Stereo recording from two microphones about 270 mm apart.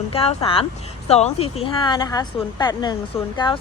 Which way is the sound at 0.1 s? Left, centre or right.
Left.